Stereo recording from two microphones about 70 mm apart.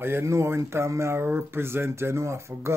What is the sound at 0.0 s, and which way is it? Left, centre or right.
Speech, right.